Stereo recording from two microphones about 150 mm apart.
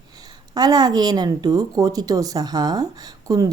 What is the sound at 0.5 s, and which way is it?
A woman's voice, 25° right (ahead or behind).